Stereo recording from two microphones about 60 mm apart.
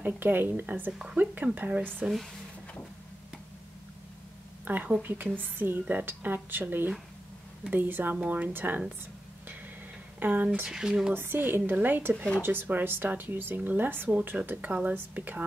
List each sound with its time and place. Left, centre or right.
0.0 s speech: right
4.6 s speech: right
10.2 s speech: right
10.7 s speech: centre
11.1 s speech: right